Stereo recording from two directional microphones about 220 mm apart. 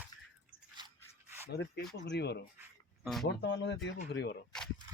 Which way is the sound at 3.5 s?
55° left (ahead or behind).